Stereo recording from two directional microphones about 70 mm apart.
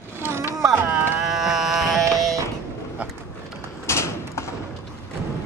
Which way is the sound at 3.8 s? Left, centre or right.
Left.